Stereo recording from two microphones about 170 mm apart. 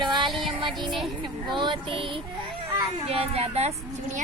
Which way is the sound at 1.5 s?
30° right (ahead or behind).